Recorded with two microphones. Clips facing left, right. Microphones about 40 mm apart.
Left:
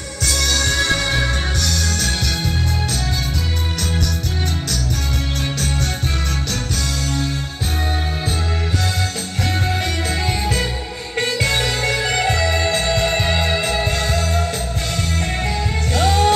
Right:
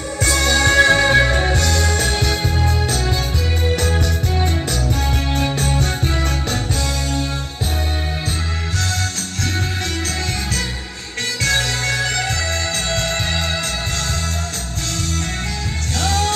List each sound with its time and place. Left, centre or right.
0.2 s music: right
11.4 s music: centre
16.0 s music: centre